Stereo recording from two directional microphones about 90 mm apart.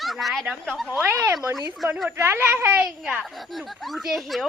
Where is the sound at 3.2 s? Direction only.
Centre (ahead or behind).